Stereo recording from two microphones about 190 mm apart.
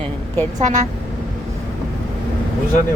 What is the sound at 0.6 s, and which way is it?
Speech, 40° right (ahead or behind).